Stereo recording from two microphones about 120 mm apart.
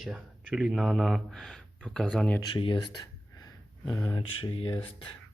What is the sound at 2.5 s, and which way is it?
Speech, 45° left (ahead or behind).